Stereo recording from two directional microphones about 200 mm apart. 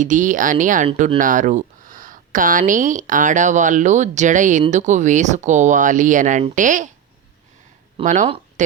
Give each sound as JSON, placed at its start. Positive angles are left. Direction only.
{"t": 0.0, "sound": "speech", "side_deg": -40}
{"t": 8.0, "sound": "speech", "side_deg": -40}